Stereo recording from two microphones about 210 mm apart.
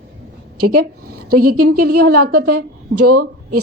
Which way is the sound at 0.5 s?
90° right.